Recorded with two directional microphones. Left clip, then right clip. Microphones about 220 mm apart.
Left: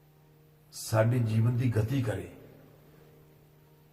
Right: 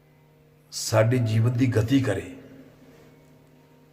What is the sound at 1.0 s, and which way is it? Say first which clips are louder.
Speech: right 5 dB; 45° right (ahead or behind).